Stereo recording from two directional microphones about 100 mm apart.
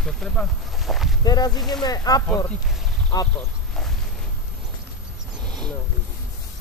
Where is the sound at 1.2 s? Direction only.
45° left (ahead or behind).